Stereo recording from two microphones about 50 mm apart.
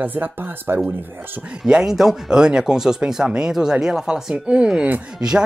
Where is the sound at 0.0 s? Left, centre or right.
Right.